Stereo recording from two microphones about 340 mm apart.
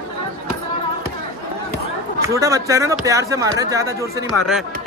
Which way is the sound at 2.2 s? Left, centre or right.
Centre.